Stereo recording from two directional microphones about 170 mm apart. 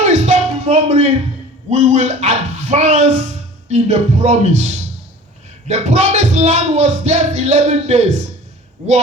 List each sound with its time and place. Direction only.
0.0 s music: 40° right (ahead or behind)
1.7 s speech: 45° right (ahead or behind)